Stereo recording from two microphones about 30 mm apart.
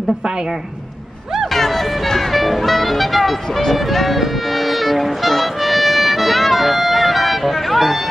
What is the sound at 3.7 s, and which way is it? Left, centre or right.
Music, centre.